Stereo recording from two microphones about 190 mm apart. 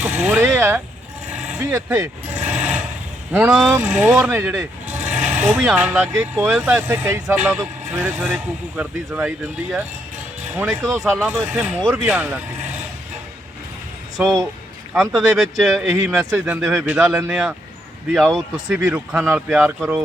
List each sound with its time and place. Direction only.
0.0 s speech: 10° right (ahead or behind)
1.3 s vehicle: 5° right (ahead or behind)
1.6 s speech: 10° right (ahead or behind)
2.4 s a sound: 5° right (ahead or behind)
3.3 s speech: 5° right (ahead or behind)
5.0 s vehicle: 40° right (ahead or behind)
5.4 s speech: centre (ahead or behind)
10.5 s speech: 10° right (ahead or behind)
14.9 s speech: centre (ahead or behind)